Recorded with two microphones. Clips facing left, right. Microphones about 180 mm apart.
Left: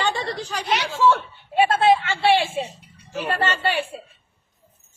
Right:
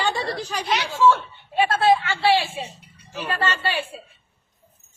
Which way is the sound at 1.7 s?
20° left (ahead or behind).